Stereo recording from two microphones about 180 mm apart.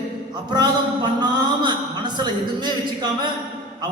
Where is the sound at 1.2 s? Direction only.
25° right (ahead or behind).